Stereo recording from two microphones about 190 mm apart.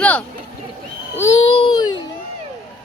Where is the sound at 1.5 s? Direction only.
25° left (ahead or behind).